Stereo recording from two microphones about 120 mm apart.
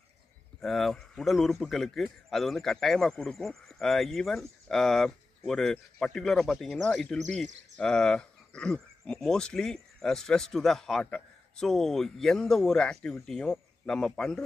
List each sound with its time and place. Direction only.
0.6 s speech: centre (ahead or behind)